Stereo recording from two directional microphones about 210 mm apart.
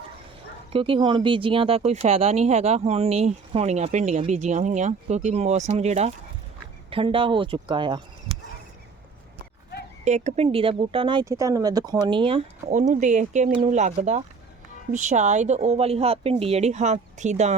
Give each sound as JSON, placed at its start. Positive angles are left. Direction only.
{"t": 0.7, "sound": "speech", "side_deg": -25}
{"t": 10.0, "sound": "speech", "side_deg": -35}